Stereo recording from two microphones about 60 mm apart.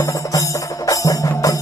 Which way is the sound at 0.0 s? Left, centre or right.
Left.